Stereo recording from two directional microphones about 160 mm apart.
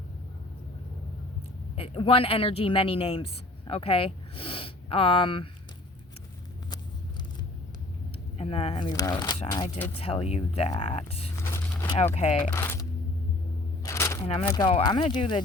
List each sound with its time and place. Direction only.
1.7 s speech: 35° left (ahead or behind)
8.4 s speech: 40° left (ahead or behind)
8.9 s speech: 25° left (ahead or behind)
10.0 s speech: 35° left (ahead or behind)
11.4 s a sound: 15° left (ahead or behind)
12.1 s speech: 40° left (ahead or behind)
12.5 s speech: 15° left (ahead or behind)
13.8 s a sound: 20° left (ahead or behind)
14.4 s speech: 25° left (ahead or behind)